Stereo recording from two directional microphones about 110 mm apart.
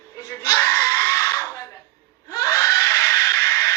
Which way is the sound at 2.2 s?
30° left (ahead or behind).